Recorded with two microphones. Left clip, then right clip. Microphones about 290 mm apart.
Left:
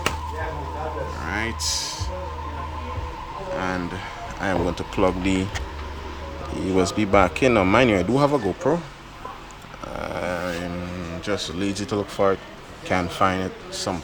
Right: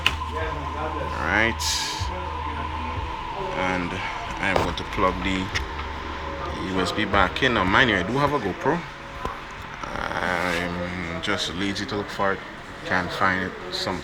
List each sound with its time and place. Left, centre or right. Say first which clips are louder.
1.2 s music: right 7 dB; centre
3.6 s a sound: right 4 dB; centre
4.9 s speech: left 1 dB; left
6.7 s speech: left 3 dB; left
10.0 s a sound: right 2 dB; left
11.3 s speech: left 1 dB; left